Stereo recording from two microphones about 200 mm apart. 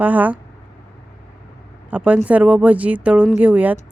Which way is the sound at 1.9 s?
5° right (ahead or behind).